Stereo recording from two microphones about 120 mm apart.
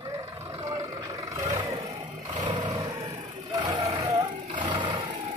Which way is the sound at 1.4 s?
30° right (ahead or behind).